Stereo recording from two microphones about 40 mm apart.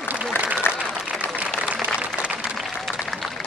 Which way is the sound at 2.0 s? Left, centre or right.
Right.